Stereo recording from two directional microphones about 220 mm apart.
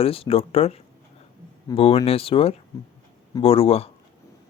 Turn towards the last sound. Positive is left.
turn(degrees=25)  # may be behind; listen again after turning